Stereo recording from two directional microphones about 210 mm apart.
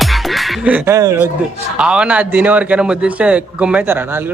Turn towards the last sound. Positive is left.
turn(degrees=-10)  # may be behind; listen again after turning